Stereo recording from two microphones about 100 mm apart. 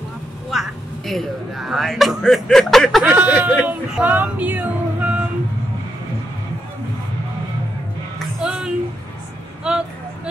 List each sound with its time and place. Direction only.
0.5 s speech: centre (ahead or behind)
3.1 s speech: 15° right (ahead or behind)
8.4 s a sound: 5° right (ahead or behind)
9.6 s speech: 10° right (ahead or behind)